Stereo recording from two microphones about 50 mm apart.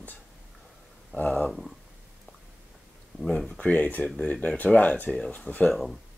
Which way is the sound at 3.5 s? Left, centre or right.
Left.